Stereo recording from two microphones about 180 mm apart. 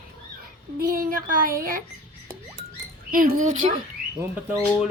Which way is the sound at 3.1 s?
45° right (ahead or behind).